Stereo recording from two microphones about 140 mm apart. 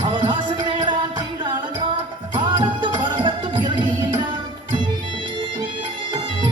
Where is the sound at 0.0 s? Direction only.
35° right (ahead or behind).